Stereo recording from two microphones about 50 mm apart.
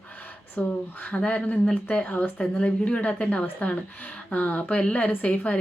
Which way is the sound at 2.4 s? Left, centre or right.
Left.